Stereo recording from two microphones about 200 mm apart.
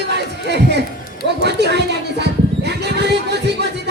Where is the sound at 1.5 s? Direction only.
55° right (ahead or behind).